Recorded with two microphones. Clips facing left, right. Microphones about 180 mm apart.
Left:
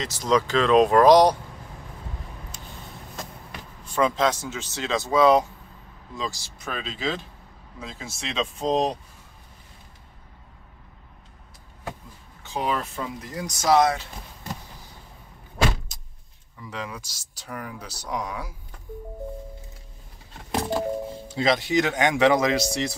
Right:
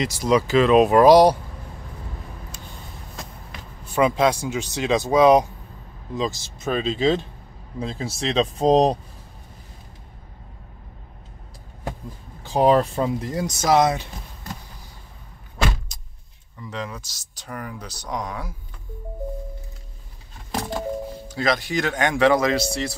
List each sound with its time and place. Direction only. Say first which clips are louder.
0.0 s speech: right 3 dB; 10° right (ahead or behind)
3.8 s speech: right 3 dB; 10° right (ahead or behind); by 8.9 s 40° right (ahead or behind)
12.4 s speech: right 10 dB; 35° right (ahead or behind)
13.7 s speech: right 1 dB; 20° right (ahead or behind)
15.9 s vehicle: right 1 dB; centre (ahead or behind)
16.6 s speech: right 3 dB; 10° left (ahead or behind)
21.1 s speech: even; 25° left (ahead or behind)